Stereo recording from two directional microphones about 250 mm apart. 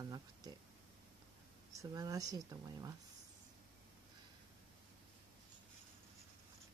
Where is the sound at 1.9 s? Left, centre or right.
Centre.